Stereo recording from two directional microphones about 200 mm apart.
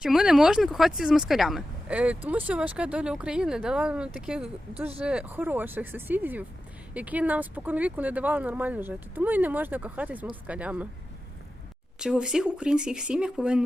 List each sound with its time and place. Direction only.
0.0 s speech: centre (ahead or behind)
11.9 s speech: 5° right (ahead or behind)